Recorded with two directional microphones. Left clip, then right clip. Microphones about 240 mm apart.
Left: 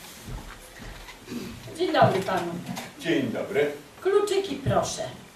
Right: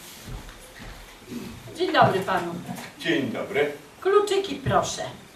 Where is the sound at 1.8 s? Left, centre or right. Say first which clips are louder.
Right 1 dB; centre.